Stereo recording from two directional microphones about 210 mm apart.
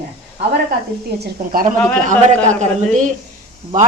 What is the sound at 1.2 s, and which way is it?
Speech, 45° right (ahead or behind).